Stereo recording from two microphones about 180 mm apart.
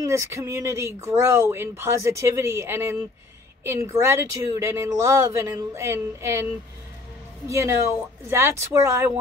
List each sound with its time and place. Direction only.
0.0 s speech: 15° right (ahead or behind)
7.4 s speech: 15° right (ahead or behind)